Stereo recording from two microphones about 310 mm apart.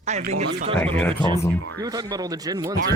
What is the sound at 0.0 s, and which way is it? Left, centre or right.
Speech, right.